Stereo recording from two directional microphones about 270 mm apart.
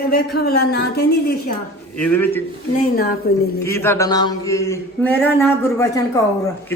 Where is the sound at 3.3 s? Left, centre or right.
Left.